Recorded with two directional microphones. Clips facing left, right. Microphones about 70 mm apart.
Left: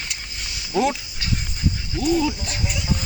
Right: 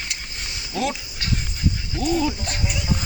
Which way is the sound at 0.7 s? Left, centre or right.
Centre.